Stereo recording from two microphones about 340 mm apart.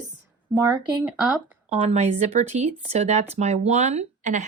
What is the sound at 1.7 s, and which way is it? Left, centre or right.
Speech, centre.